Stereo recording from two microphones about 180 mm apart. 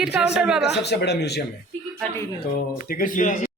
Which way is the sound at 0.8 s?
70° left (ahead or behind).